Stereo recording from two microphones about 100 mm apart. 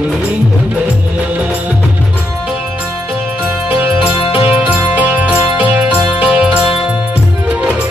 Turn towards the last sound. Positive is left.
turn(degrees=-15)  # may be behind; listen again after turning